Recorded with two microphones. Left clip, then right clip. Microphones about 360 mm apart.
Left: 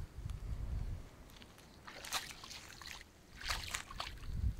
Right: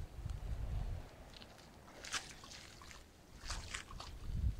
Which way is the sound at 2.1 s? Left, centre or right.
Left.